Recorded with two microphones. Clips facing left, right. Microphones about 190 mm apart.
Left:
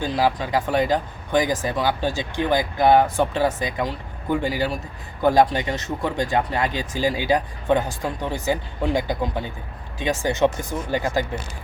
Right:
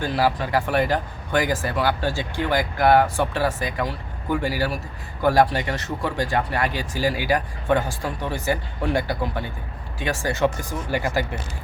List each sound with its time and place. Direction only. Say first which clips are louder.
0.0 s speech: even; 15° left (ahead or behind)